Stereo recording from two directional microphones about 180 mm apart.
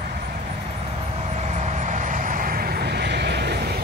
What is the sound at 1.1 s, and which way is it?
Vehicle, 40° right (ahead or behind).